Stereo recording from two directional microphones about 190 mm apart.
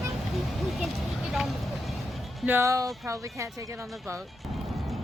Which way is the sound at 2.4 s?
10° right (ahead or behind).